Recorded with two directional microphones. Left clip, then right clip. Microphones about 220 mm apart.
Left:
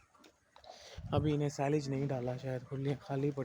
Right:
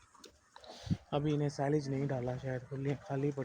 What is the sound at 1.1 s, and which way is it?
Speech, 15° left (ahead or behind).